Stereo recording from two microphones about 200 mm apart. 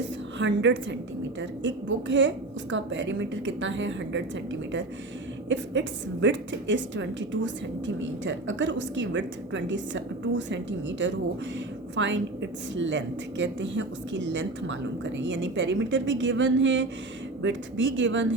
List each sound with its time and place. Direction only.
0.3 s a woman's voice: 65° right (ahead or behind)
5.5 s a woman's voice: 65° right (ahead or behind)